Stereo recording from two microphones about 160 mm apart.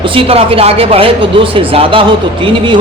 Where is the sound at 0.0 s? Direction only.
35° right (ahead or behind).